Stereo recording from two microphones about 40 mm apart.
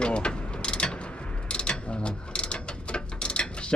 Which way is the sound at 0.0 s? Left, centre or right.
Left.